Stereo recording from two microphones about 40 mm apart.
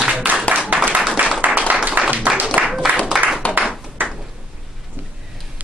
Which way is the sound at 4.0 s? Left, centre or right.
Right.